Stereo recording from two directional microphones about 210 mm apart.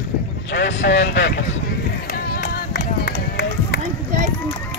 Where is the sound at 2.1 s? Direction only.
45° left (ahead or behind).